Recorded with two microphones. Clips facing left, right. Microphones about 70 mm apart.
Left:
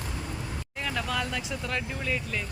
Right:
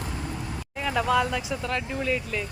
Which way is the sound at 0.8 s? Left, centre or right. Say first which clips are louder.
Right 8 dB; centre.